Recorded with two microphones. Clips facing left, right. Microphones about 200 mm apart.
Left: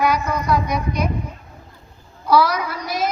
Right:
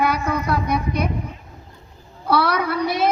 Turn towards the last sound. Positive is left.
turn(degrees=-60)  # may be behind; listen again after turning